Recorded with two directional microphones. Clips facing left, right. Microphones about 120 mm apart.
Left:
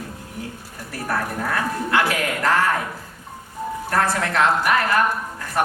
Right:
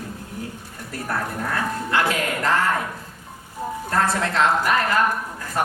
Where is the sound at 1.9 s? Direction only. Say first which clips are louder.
Left 1 dB; 20° right (ahead or behind).